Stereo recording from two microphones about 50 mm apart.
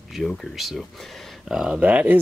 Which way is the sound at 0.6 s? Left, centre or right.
Centre.